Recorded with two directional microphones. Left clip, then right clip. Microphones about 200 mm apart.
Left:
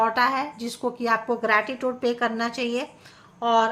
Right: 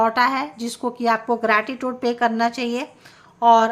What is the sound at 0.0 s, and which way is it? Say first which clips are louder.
A woman's voice: right 3 dB; 25° right (ahead or behind).